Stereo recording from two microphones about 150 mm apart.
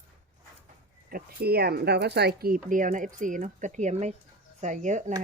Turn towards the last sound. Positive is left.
turn(degrees=-55)  # may be behind; listen again after turning